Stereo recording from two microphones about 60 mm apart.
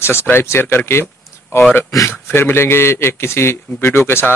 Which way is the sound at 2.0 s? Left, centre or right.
Left.